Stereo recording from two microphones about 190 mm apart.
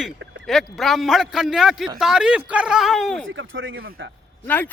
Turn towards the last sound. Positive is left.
turn(degrees=10)  # may be behind; listen again after turning